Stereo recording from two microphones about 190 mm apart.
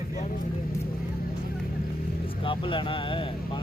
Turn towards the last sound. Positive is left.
turn(degrees=25)  # may be behind; listen again after turning